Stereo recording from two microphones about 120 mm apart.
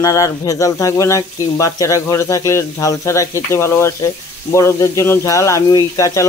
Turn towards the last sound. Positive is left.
turn(degrees=25)  # may be behind; listen again after turning